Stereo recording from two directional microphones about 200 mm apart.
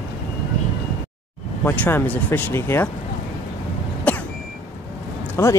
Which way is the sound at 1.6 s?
10° left (ahead or behind).